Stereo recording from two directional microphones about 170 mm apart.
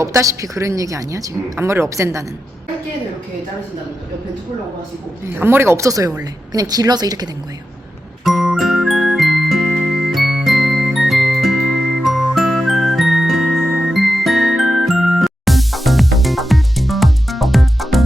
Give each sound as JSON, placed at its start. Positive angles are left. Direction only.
{"t": 0.0, "sound": "a woman's voice", "side_deg": -20}
{"t": 5.2, "sound": "a woman's voice", "side_deg": -15}
{"t": 8.2, "sound": "music", "side_deg": 0}